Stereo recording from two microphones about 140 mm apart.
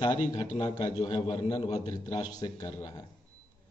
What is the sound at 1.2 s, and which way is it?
Speech, 50° left (ahead or behind).